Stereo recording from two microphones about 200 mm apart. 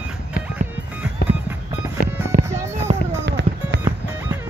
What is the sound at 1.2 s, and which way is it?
Music, 55° left (ahead or behind).